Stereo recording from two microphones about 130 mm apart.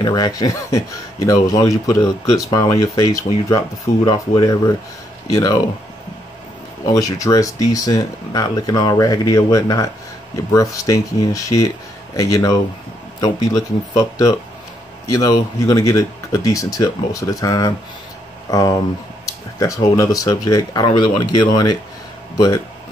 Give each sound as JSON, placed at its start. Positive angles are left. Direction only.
{"t": 0.0, "sound": "speech", "side_deg": 30}
{"t": 6.9, "sound": "speech", "side_deg": 25}
{"t": 19.2, "sound": "a sound", "side_deg": 25}
{"t": 20.0, "sound": "speech", "side_deg": 25}